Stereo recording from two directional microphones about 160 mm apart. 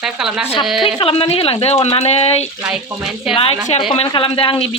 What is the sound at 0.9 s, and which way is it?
Speech, 35° left (ahead or behind).